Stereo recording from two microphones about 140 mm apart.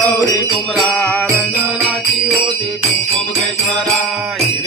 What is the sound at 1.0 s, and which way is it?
Music, 15° left (ahead or behind).